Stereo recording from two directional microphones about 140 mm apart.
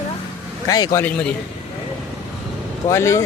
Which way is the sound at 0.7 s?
25° left (ahead or behind).